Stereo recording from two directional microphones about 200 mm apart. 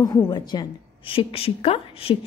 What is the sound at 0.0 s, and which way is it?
A woman's voice, 20° left (ahead or behind).